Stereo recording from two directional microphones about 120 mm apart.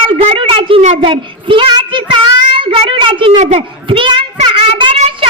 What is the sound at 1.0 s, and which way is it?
Child singing, 45° right (ahead or behind).